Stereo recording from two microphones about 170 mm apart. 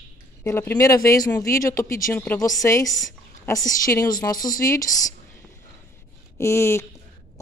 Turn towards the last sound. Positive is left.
turn(degrees=15)  # may be behind; listen again after turning